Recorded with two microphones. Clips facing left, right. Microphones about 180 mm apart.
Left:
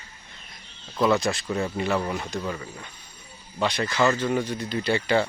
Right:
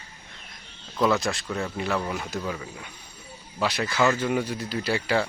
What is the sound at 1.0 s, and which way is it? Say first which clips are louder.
Speech: left 1 dB; centre (ahead or behind).